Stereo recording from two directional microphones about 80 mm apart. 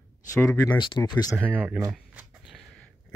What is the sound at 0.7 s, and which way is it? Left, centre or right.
Speech, left.